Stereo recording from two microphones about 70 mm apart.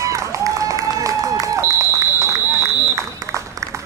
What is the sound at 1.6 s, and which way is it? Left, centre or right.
Run, right.